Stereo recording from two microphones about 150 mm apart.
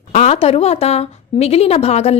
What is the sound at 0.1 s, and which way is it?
A woman's voice, 50° left (ahead or behind).